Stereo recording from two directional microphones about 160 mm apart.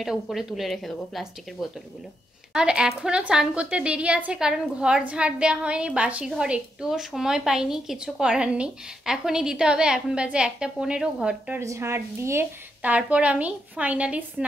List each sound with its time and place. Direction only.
0.0 s a woman's voice: centre (ahead or behind)
11.6 s a woman's voice: 20° right (ahead or behind)